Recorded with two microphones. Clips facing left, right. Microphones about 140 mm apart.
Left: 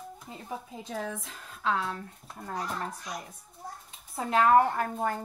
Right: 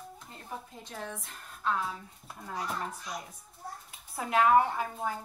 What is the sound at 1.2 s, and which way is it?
Speech, 90° left.